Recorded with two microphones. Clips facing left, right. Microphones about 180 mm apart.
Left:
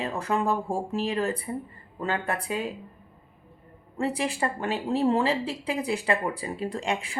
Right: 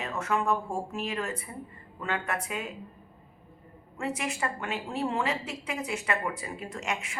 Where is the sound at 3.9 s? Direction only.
35° left (ahead or behind).